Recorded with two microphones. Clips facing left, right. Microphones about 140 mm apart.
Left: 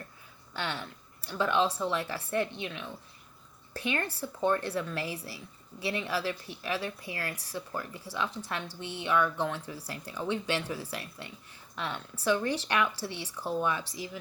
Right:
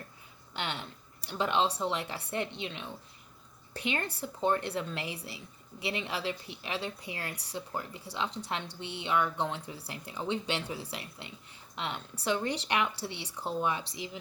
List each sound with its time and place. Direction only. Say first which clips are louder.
0.5 s a woman's voice: left 1 dB; 20° right (ahead or behind)